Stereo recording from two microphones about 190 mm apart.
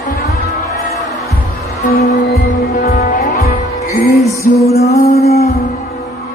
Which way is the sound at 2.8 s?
55° left (ahead or behind).